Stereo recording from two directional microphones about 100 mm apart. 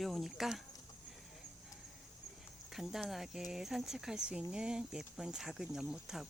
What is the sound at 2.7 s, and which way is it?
Speech, 5° right (ahead or behind).